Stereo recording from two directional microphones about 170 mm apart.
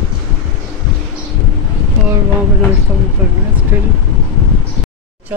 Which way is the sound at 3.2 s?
10° right (ahead or behind).